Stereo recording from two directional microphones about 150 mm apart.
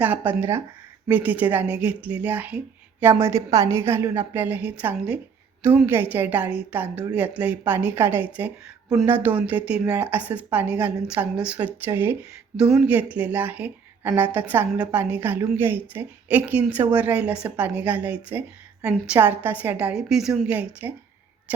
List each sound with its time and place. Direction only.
0.0 s a woman's voice: 10° right (ahead or behind)